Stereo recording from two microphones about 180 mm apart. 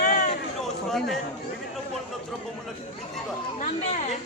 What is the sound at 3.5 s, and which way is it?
Speech, 40° left (ahead or behind).